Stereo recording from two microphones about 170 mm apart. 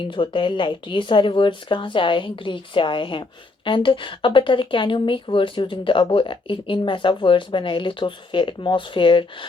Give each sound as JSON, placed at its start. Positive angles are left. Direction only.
{"t": 0.0, "sound": "a woman's voice", "side_deg": 30}